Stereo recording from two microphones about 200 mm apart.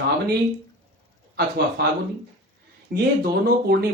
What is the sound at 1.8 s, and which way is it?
A man's voice, 55° right (ahead or behind).